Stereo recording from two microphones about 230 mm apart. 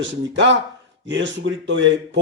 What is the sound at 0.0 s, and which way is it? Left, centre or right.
A man's voice, right.